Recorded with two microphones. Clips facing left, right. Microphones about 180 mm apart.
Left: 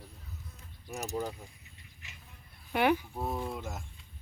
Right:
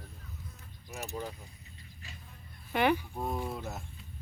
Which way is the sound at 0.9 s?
40° left (ahead or behind).